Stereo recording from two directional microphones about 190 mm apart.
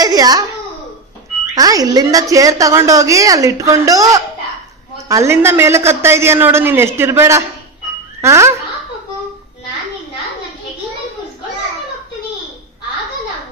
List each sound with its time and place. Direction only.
0.0 s a child's voice: 20° right (ahead or behind)
1.5 s a woman's voice: 20° right (ahead or behind)